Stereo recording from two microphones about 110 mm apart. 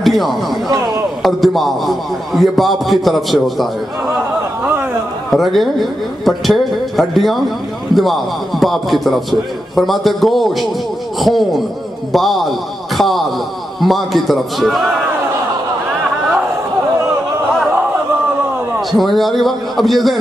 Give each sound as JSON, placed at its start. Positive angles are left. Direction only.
{"t": 0.0, "sound": "speech", "side_deg": 0}
{"t": 0.7, "sound": "speech", "side_deg": -35}
{"t": 1.2, "sound": "a man's voice", "side_deg": 0}
{"t": 5.3, "sound": "a man's voice", "side_deg": 0}
{"t": 18.9, "sound": "a man's voice", "side_deg": 0}